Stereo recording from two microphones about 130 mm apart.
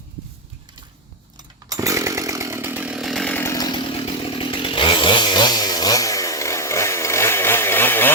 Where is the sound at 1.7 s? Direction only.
25° right (ahead or behind).